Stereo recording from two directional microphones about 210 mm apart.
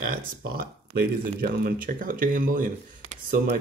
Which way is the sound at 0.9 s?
45° right (ahead or behind).